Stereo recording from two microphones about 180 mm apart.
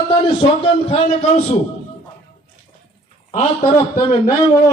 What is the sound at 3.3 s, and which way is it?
Speech, 35° left (ahead or behind).